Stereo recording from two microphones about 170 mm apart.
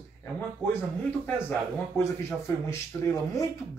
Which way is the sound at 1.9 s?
15° left (ahead or behind).